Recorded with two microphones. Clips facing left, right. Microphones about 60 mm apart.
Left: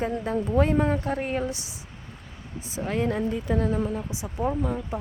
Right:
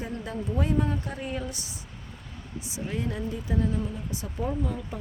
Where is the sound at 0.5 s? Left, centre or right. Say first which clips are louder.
Left 5 dB; left.